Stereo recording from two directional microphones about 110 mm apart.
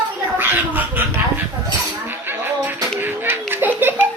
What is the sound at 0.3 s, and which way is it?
Cat, 20° right (ahead or behind).